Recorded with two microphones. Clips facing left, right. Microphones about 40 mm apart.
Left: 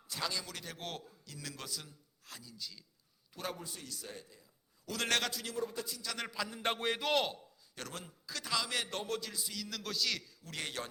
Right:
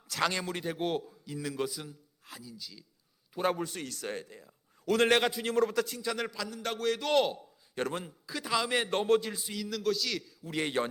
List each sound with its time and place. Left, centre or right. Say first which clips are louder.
0.1 s speech: right 8 dB; right
0.4 s a man's voice: right 11 dB; right; by 2.8 s centre
3.4 s a man's voice: right 11 dB; right
5.0 s a man's voice: right 5 dB; right
5.5 s a man's voice: right 12 dB; right
6.3 s a man's voice: right 1 dB; centre
6.6 s a man's voice: right 3 dB; left
7.0 s a man's voice: right 7 dB; centre
7.8 s a man's voice: right 12 dB; right
8.3 s a man's voice: right 6 dB; centre; by 9.6 s right
9.6 s a man's voice: right 7 dB; centre
10.5 s a man's voice: right 10 dB; right